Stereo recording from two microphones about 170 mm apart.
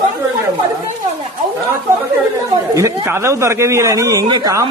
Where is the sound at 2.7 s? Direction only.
15° right (ahead or behind).